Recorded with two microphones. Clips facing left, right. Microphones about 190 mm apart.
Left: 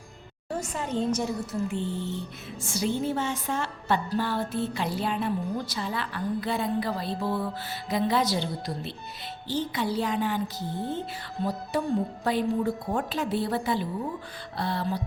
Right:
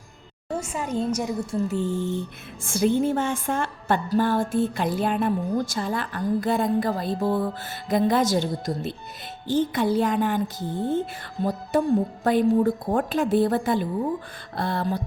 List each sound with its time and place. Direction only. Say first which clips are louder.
0.6 s a woman's voice: right 1 dB; 10° right (ahead or behind)
1.4 s speech: right 5 dB; 25° right (ahead or behind)
1.6 s music: right 5 dB; 40° right (ahead or behind)